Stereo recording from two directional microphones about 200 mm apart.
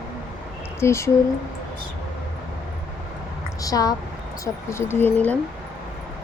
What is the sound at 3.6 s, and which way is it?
Speech, 20° left (ahead or behind).